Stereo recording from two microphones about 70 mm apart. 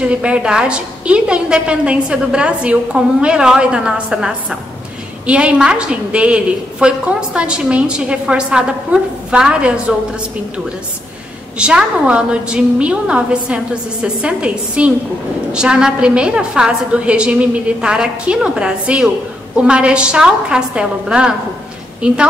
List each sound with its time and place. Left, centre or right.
0.0 s a woman's voice: centre
11.5 s a woman's voice: centre